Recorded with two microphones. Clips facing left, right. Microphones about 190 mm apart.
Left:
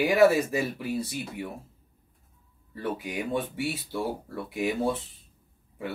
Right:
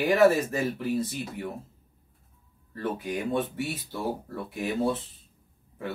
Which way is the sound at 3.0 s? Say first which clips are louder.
Right 3 dB; 10° left (ahead or behind).